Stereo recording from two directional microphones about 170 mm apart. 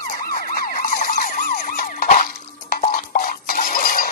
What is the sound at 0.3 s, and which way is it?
Emergency vehicle, 55° left (ahead or behind).